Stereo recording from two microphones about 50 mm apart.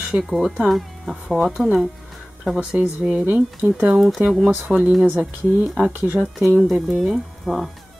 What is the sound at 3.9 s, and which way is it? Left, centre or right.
Speech, centre.